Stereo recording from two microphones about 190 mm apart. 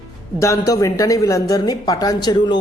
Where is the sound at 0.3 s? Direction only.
15° left (ahead or behind).